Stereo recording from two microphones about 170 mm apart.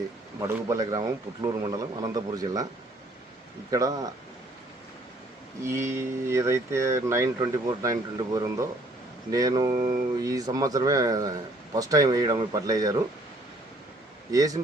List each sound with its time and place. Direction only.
0.3 s a man's voice: 20° right (ahead or behind)
3.7 s a man's voice: 20° right (ahead or behind)
5.6 s a man's voice: 15° right (ahead or behind)
14.3 s a man's voice: 20° right (ahead or behind)